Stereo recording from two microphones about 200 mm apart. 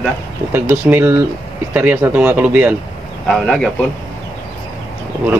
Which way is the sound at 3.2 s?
Centre (ahead or behind).